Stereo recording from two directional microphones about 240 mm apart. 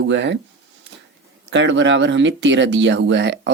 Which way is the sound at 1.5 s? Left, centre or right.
Right.